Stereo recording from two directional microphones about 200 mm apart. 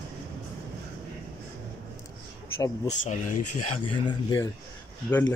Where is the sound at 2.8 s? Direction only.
40° left (ahead or behind).